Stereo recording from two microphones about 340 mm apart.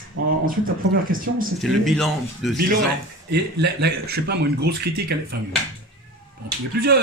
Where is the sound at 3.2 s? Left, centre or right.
Right.